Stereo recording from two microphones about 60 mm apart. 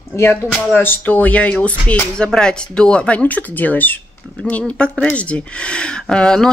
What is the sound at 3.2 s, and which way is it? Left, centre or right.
Speech, left.